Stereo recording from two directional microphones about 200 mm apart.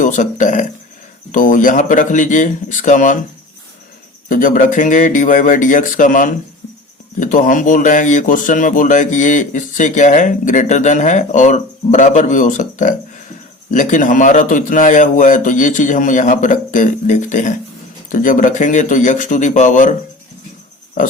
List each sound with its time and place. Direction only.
0.0 s speech: 40° left (ahead or behind)
4.3 s speech: 40° left (ahead or behind)